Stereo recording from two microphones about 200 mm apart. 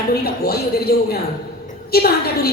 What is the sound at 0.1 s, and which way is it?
A woman's voice, 50° left (ahead or behind).